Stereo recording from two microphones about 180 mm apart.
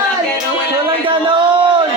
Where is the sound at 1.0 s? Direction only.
30° right (ahead or behind).